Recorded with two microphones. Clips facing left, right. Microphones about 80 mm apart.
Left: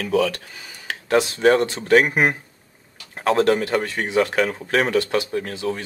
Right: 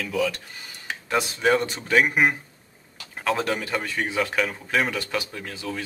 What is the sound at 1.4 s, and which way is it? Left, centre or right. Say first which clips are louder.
Speech: left 3 dB; left.